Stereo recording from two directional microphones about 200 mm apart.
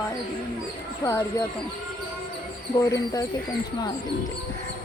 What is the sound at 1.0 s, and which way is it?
Speech, 15° left (ahead or behind).